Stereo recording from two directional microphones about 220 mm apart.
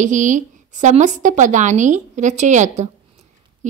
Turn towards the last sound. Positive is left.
turn(degrees=-30)  # may be behind; listen again after turning